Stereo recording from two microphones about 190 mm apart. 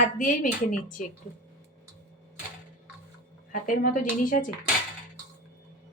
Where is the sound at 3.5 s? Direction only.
45° left (ahead or behind).